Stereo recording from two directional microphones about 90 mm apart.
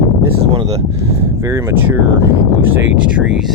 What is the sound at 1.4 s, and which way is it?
Speech, 30° right (ahead or behind).